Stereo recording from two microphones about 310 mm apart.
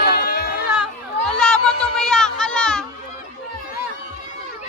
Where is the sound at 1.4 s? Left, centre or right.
Centre.